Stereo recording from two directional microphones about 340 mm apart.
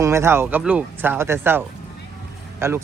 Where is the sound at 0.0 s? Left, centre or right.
Centre.